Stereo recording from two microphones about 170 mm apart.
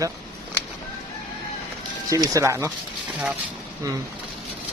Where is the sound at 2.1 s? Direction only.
15° right (ahead or behind).